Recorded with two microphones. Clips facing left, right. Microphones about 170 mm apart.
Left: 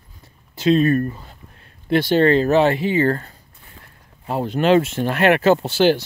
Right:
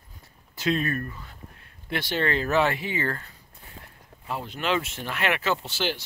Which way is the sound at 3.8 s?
35° right (ahead or behind).